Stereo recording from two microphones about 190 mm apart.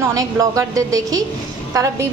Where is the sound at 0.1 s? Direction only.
20° right (ahead or behind).